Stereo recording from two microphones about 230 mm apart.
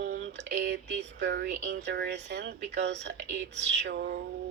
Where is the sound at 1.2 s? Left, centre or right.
Right.